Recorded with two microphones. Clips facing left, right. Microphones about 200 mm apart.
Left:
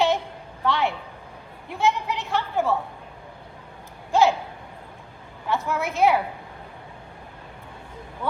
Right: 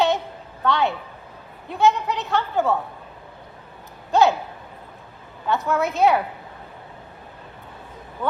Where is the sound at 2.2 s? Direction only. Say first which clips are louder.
Right 2 dB; 20° right (ahead or behind).